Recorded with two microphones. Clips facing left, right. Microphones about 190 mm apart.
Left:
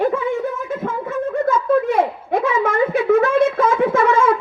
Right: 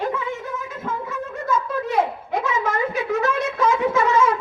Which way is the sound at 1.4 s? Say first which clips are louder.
Left 6 dB; 55° left (ahead or behind).